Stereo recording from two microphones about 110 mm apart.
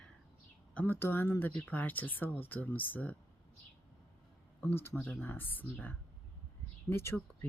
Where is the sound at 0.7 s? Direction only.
15° left (ahead or behind).